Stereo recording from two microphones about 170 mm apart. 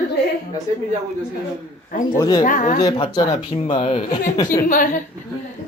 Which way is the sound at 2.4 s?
50° left (ahead or behind).